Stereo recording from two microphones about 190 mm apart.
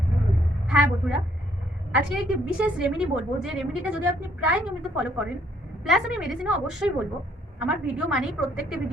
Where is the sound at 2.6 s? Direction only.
5° right (ahead or behind).